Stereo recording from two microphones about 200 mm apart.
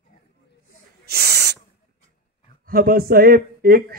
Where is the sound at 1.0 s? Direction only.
55° right (ahead or behind).